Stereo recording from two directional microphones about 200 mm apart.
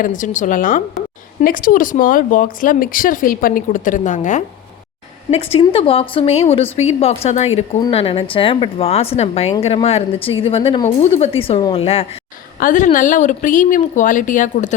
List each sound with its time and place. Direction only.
0.0 s a woman's voice: 40° left (ahead or behind)
12.5 s a woman's voice: 40° left (ahead or behind)